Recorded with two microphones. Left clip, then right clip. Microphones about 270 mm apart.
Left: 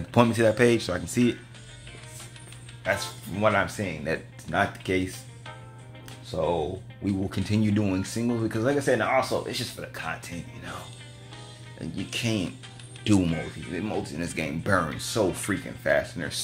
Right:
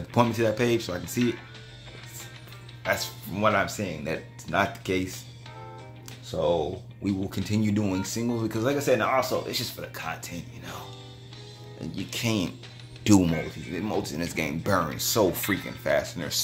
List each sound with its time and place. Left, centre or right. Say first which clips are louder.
0.1 s speech: left 2 dB; centre
2.8 s speech: even; centre
7.1 s speech: left 1 dB; centre
11.8 s speech: even; centre
13.0 s speech: right 3 dB; centre
13.3 s speech: right 1 dB; centre